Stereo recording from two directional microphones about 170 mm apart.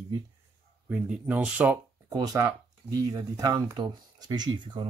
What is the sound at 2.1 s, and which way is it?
Speech, 20° right (ahead or behind).